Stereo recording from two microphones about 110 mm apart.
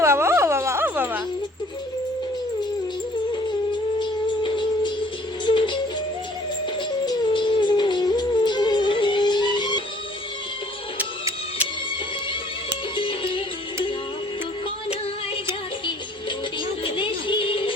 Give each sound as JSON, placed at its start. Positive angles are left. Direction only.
{"t": 0.0, "sound": "music", "side_deg": -25}
{"t": 4.0, "sound": "music", "side_deg": 45}
{"t": 7.0, "sound": "music", "side_deg": 40}
{"t": 13.0, "sound": "music", "side_deg": 50}
{"t": 16.8, "sound": "music", "side_deg": 50}